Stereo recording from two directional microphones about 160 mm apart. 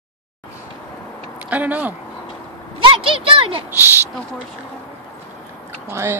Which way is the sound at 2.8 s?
35° right (ahead or behind).